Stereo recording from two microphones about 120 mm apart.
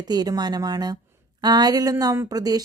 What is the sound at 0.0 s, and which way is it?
A woman's voice, 35° right (ahead or behind).